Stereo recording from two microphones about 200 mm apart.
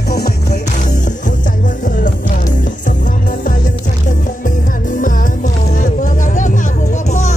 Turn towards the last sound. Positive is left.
turn(degrees=35)  # may be behind; listen again after turning